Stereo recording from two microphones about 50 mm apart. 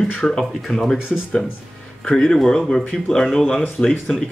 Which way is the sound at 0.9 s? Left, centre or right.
Centre.